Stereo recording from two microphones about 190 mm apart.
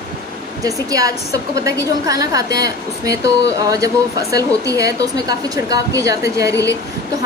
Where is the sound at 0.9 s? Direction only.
20° right (ahead or behind).